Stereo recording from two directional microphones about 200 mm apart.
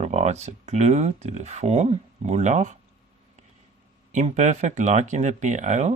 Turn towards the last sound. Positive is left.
turn(degrees=-35)  # may be behind; listen again after turning